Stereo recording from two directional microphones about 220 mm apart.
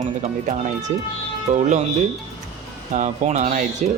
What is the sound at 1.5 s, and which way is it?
Speech, 35° right (ahead or behind).